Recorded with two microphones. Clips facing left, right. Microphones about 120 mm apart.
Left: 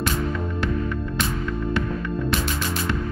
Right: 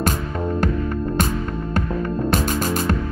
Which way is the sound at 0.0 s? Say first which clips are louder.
Right 2 dB; 45° right (ahead or behind).